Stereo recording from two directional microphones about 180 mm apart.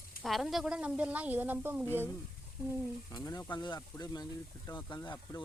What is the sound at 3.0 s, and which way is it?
Speech, 20° left (ahead or behind).